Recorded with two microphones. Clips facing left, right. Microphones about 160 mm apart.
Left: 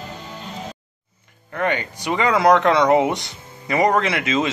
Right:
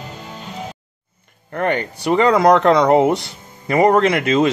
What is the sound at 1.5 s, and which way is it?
Speech, 45° right (ahead or behind).